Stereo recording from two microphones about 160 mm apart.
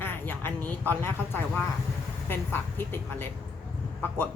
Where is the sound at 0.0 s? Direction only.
10° left (ahead or behind).